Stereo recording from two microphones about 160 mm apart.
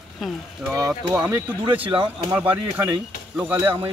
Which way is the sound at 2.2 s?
10° right (ahead or behind).